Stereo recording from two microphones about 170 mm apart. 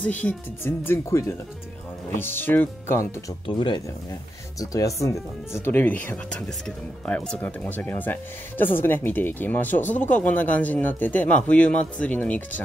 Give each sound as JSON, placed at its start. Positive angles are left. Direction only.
{"t": 0.0, "sound": "speech", "side_deg": 10}
{"t": 3.4, "sound": "speech", "side_deg": 30}
{"t": 7.1, "sound": "speech", "side_deg": 10}